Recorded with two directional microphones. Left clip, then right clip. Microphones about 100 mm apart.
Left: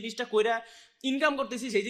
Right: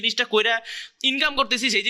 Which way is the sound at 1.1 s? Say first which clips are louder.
Right 3 dB; 15° right (ahead or behind).